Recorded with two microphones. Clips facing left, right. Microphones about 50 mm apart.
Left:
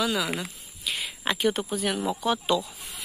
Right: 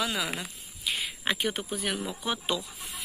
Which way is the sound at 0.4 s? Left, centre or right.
Centre.